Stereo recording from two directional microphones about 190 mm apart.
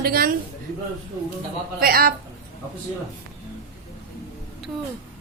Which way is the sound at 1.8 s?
50° right (ahead or behind).